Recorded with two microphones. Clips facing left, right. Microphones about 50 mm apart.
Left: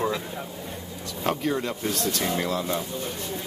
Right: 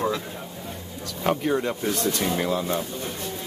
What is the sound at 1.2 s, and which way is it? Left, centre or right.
Speech, centre.